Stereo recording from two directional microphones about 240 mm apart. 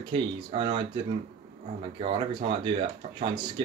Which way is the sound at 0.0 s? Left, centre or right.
Right.